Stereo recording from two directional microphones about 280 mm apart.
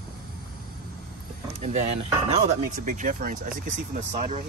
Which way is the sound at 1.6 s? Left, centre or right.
Right.